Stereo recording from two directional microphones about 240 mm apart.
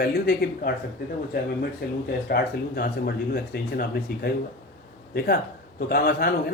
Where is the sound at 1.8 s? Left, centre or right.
Left.